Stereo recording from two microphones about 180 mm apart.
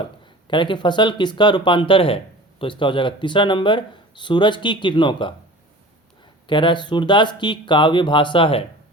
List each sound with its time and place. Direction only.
0.0 s speech: 25° left (ahead or behind)
6.5 s speech: 25° left (ahead or behind)